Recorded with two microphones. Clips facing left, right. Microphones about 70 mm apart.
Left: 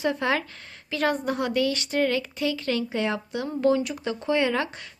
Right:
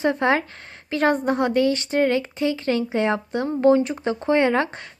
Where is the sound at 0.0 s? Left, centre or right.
Right.